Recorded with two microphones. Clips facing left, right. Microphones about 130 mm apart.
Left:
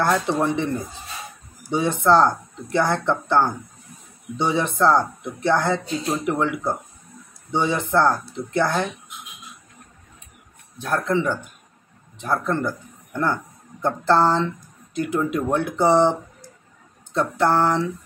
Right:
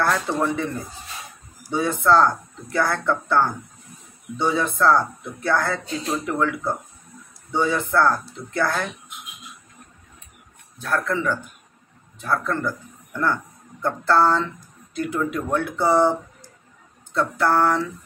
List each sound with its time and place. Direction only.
0.3 s speech: 25° left (ahead or behind)
1.7 s speech: 25° left (ahead or behind)
10.8 s speech: 20° left (ahead or behind)
17.1 s speech: 20° left (ahead or behind)